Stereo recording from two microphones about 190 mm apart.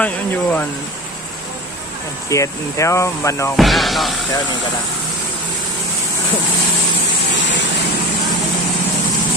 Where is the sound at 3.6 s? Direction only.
Centre (ahead or behind).